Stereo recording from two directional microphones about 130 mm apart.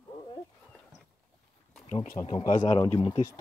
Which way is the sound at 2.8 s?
30° left (ahead or behind).